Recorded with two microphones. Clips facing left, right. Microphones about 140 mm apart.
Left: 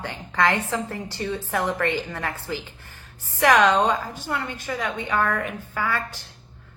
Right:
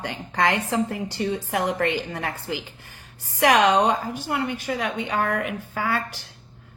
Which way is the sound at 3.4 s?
15° right (ahead or behind).